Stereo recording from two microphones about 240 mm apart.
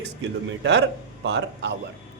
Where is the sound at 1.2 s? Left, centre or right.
Right.